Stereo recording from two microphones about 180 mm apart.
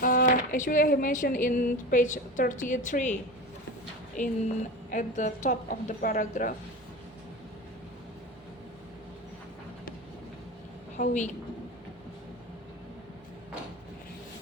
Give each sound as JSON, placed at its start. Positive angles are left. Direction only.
{"t": 0.0, "sound": "speech", "side_deg": 50}
{"t": 4.9, "sound": "speech", "side_deg": 45}
{"t": 10.9, "sound": "a woman's voice", "side_deg": 45}